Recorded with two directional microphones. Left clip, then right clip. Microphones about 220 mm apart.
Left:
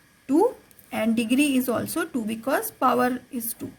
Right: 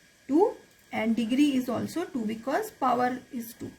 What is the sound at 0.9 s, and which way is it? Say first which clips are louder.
Speech: left 4 dB; 40° left (ahead or behind).